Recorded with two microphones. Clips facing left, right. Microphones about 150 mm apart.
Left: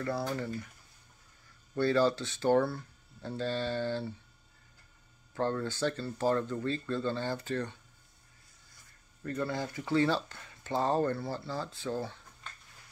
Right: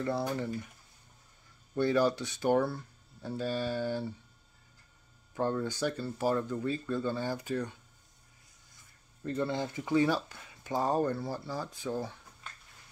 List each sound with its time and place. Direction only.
0.0 s speech: 15° right (ahead or behind)
1.8 s speech: 15° right (ahead or behind)
5.3 s speech: 10° right (ahead or behind)
9.2 s speech: 20° right (ahead or behind)